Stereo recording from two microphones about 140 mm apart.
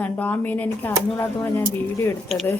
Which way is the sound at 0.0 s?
10° left (ahead or behind).